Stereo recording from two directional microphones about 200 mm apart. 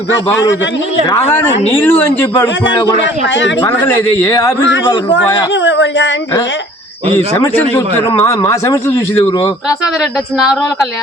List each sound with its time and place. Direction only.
1.8 s a man's voice: 10° left (ahead or behind)
5.6 s speech: 60° left (ahead or behind)
7.3 s a man's voice: 10° left (ahead or behind)
10.3 s speech: 5° right (ahead or behind)